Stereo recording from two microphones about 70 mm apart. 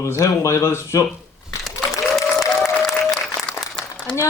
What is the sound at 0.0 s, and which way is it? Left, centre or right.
Speech, left.